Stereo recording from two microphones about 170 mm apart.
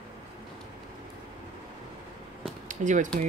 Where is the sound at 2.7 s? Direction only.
50° right (ahead or behind).